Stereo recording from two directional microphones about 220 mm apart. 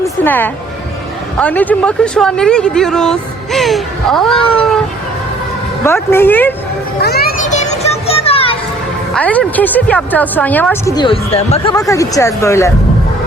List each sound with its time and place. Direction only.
0.0 s music: 10° left (ahead or behind)
1.4 s speech: 5° left (ahead or behind)
5.8 s a woman's voice: 10° left (ahead or behind)
7.0 s children playing: 45° left (ahead or behind)
7.5 s music: 30° left (ahead or behind)
9.1 s a woman's voice: 5° left (ahead or behind); by 11.7 s 25° left (ahead or behind)
11.7 s a woman's voice: 15° left (ahead or behind)